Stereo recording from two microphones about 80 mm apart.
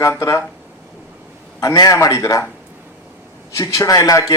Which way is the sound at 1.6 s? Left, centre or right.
Left.